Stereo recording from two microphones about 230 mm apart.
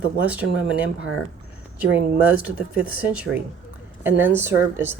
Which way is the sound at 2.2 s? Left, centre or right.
Centre.